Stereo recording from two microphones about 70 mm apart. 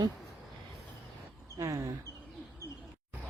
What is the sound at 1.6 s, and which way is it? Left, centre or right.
Speech, right.